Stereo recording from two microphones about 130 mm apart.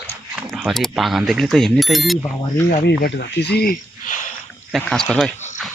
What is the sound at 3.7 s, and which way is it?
Speech, 80° left.